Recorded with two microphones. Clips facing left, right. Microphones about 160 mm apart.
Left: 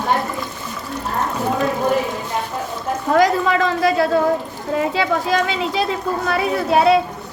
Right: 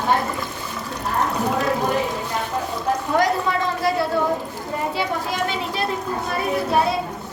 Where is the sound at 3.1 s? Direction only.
90° left.